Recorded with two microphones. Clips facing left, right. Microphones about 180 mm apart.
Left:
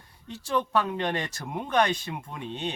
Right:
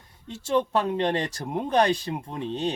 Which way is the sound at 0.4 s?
30° right (ahead or behind).